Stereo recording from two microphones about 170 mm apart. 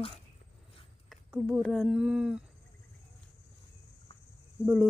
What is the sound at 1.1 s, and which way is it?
Speech, 5° right (ahead or behind).